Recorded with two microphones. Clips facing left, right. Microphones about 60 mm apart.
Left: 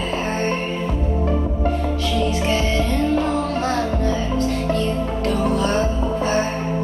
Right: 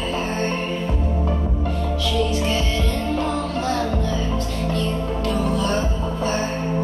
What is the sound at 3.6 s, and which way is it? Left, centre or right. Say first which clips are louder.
Music: left 2 dB; left.